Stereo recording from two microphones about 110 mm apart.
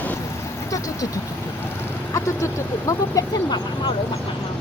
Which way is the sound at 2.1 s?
30° left (ahead or behind).